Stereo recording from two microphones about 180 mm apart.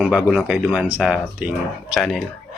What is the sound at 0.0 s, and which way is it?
Speech, 5° right (ahead or behind).